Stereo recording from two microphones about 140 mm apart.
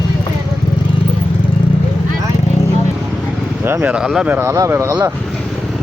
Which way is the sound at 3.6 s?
15° right (ahead or behind).